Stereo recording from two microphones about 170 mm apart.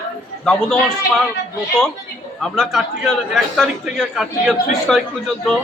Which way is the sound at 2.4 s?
Centre (ahead or behind).